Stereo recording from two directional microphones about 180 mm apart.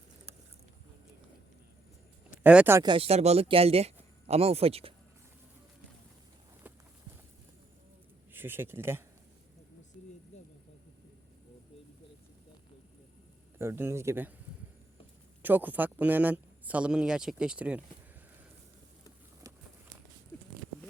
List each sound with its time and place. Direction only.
2.4 s speech: 10° right (ahead or behind)
2.8 s a man's voice: 30° right (ahead or behind)
8.3 s speech: 10° right (ahead or behind)
10.3 s insect: 40° left (ahead or behind)
13.6 s speech: 15° right (ahead or behind)
15.4 s speech: 10° right (ahead or behind)